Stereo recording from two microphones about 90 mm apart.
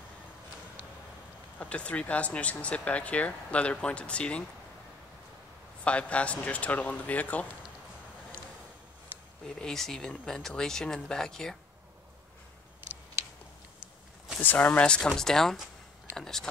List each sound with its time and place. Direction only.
1.6 s speech: 15° left (ahead or behind)
5.9 s speech: 15° left (ahead or behind)
9.6 s speech: 5° left (ahead or behind)
14.4 s speech: 20° left (ahead or behind)